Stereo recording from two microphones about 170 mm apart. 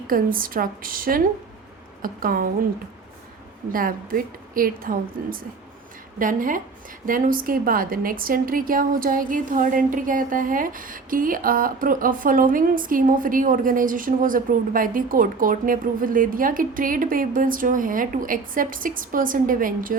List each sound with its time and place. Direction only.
0.1 s a woman's voice: 55° right (ahead or behind)
3.7 s a woman's voice: 55° right (ahead or behind)